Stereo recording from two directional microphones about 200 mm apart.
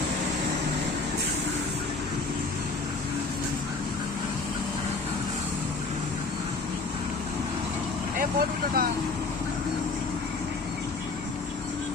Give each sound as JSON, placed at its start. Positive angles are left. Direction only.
{"t": 8.2, "sound": "speech", "side_deg": -45}